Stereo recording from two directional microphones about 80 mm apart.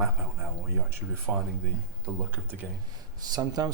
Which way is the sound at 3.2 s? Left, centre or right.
Right.